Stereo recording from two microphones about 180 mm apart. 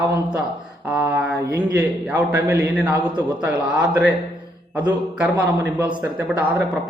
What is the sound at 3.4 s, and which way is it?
Speech, 10° right (ahead or behind).